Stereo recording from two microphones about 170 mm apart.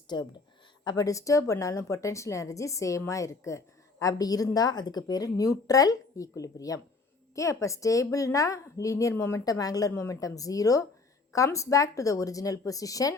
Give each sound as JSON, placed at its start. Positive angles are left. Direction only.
{"t": 0.1, "sound": "a woman's voice", "side_deg": 25}